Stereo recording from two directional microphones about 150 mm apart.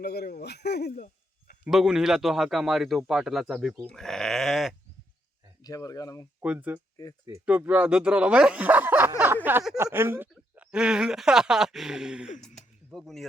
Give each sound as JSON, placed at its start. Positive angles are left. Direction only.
{"t": 0.0, "sound": "a man's voice", "side_deg": 90}
{"t": 1.6, "sound": "speech", "side_deg": -5}
{"t": 5.6, "sound": "speech", "side_deg": 25}
{"t": 6.4, "sound": "speech", "side_deg": -10}
{"t": 7.0, "sound": "speech", "side_deg": 25}
{"t": 7.4, "sound": "speech", "side_deg": -10}
{"t": 12.5, "sound": "a sound", "side_deg": 0}